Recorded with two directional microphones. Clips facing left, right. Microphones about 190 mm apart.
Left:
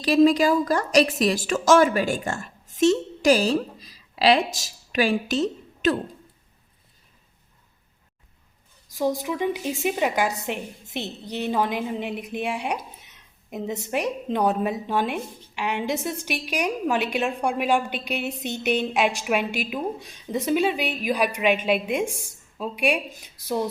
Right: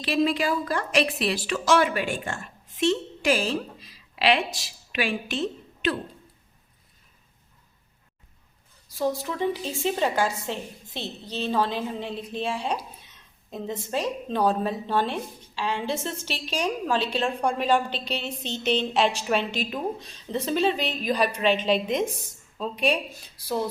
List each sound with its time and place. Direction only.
0.0 s a woman's voice: 40° left (ahead or behind)
8.9 s a woman's voice: 15° left (ahead or behind)